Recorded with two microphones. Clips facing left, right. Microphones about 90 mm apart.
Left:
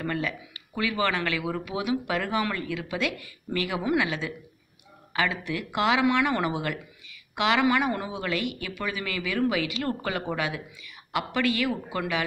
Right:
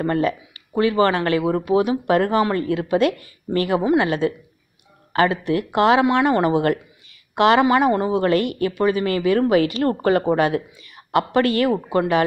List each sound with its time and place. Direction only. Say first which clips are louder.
0.0 s speech: right 10 dB; 40° right (ahead or behind)
7.6 s speech: right 8 dB; 30° right (ahead or behind)
8.1 s speech: right 11 dB; 45° right (ahead or behind)